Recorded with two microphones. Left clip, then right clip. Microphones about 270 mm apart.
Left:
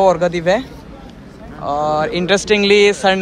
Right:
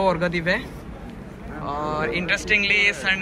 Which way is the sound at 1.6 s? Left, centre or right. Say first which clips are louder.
Left 9 dB; centre.